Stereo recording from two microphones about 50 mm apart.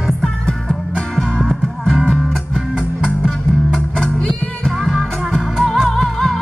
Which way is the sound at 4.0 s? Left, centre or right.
Centre.